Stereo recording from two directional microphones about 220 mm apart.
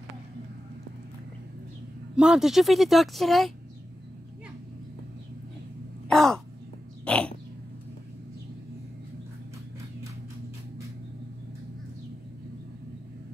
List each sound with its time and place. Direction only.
2.1 s a woman's voice: 5° right (ahead or behind)
6.0 s caw: centre (ahead or behind)
7.1 s dog: 5° left (ahead or behind)